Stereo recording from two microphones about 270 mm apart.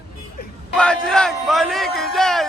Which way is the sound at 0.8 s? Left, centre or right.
Centre.